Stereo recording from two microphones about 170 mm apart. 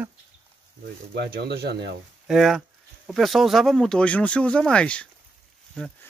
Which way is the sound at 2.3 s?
Centre (ahead or behind).